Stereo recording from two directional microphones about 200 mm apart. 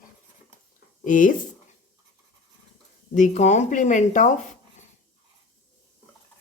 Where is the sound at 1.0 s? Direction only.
40° left (ahead or behind).